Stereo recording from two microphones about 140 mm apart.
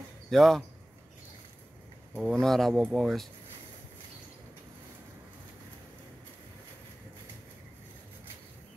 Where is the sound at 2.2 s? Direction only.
Centre (ahead or behind).